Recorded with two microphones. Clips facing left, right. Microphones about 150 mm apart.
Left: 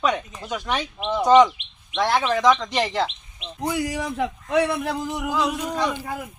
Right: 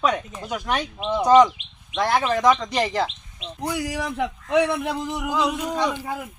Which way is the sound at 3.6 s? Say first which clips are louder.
Left 2 dB; 10° left (ahead or behind).